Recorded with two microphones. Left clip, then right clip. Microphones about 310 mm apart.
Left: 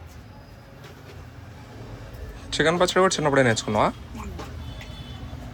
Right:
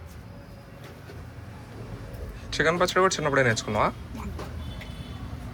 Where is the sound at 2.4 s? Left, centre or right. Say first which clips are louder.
Left 2 dB; centre.